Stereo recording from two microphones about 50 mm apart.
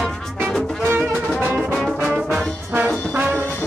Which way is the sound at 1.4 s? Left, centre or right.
Right.